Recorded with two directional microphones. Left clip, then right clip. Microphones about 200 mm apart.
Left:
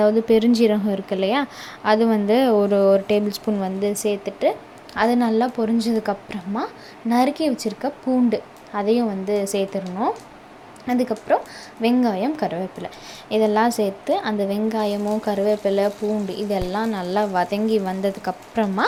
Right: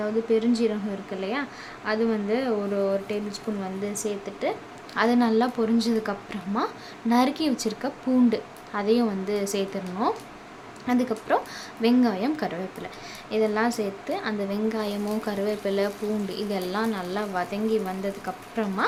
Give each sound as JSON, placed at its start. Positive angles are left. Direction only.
{"t": 0.0, "sound": "a woman's voice", "side_deg": 35}